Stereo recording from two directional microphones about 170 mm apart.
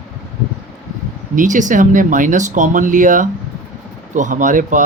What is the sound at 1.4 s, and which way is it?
Speech, 50° right (ahead or behind).